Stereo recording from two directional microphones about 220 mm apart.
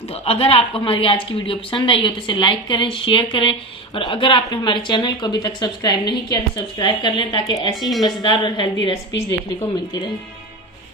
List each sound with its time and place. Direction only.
0.1 s speech: 25° left (ahead or behind)
7.8 s a woman's voice: centre (ahead or behind)
8.0 s speech: 20° left (ahead or behind)